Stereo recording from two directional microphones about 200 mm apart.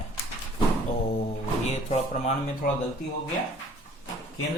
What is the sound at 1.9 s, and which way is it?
Speech, 30° left (ahead or behind).